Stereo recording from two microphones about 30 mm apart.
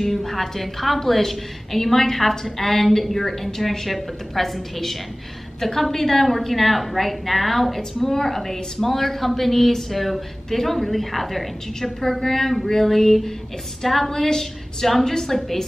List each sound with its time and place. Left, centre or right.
0.0 s a woman's voice: centre